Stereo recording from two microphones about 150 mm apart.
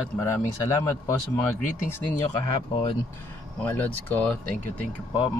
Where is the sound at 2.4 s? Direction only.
30° left (ahead or behind).